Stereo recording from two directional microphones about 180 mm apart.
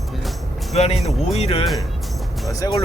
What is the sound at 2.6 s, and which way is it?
Speech, 20° left (ahead or behind).